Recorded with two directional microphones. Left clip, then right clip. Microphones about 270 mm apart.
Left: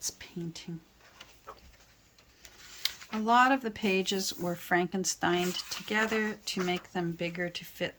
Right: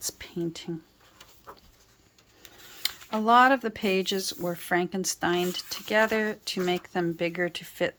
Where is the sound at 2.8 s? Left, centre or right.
Centre.